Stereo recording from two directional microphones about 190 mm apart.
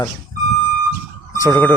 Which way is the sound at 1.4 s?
10° left (ahead or behind).